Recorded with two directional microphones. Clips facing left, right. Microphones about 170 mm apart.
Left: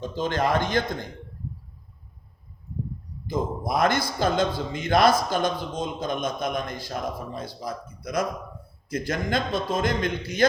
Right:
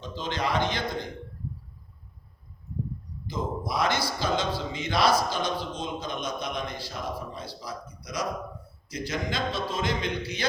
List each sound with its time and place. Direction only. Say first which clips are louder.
0.0 s a man's voice: left 6 dB; 50° left (ahead or behind)
3.2 s a man's voice: left 4 dB; 50° left (ahead or behind)